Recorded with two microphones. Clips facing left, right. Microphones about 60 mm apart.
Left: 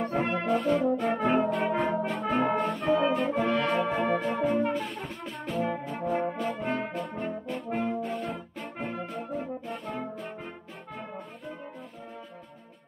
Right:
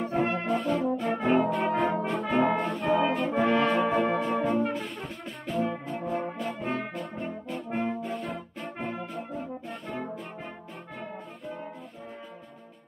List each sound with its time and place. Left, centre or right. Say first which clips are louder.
0.0 s brass instrument: even; centre
2.9 s music: even; centre
3.3 s brass instrument: right 3 dB; right
3.9 s music: right 2 dB; centre
5.9 s brass instrument: left 2 dB; centre